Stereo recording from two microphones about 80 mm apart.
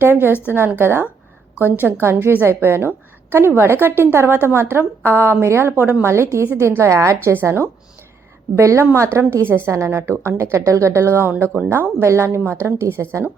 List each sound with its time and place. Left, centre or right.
0.0 s a woman's voice: right